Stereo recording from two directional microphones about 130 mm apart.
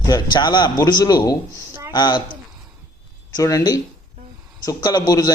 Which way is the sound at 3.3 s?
25° left (ahead or behind).